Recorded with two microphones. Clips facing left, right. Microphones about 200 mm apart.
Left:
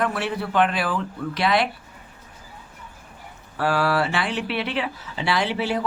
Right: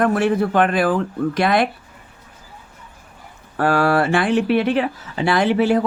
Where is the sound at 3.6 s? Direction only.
50° right (ahead or behind).